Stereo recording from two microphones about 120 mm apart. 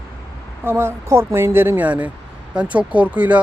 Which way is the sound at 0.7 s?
20° right (ahead or behind).